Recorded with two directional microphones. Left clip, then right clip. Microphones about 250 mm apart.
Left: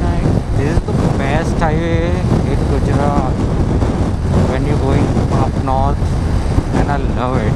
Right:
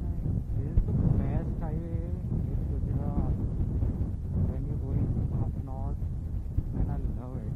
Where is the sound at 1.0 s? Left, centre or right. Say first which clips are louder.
Left 17 dB; centre.